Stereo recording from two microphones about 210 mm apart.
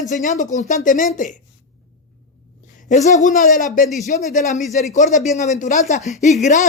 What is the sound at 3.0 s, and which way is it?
Speech, 35° left (ahead or behind).